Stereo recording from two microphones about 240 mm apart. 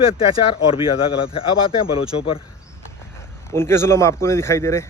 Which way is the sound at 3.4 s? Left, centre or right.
Centre.